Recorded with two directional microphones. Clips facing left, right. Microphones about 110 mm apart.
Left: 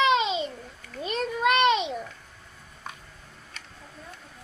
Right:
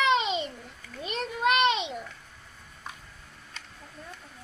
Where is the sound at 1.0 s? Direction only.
35° left (ahead or behind).